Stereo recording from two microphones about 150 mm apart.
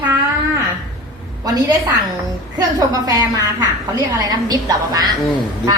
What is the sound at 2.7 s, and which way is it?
A woman's voice, 25° right (ahead or behind).